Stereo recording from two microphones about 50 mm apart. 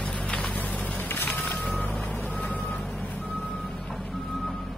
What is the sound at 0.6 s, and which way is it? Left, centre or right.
Vehicle, left.